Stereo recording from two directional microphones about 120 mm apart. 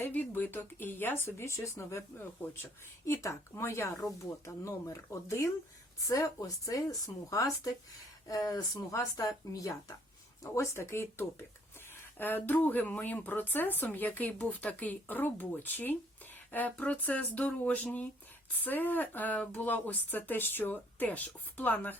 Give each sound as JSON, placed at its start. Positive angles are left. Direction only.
{"t": 0.0, "sound": "speech", "side_deg": 15}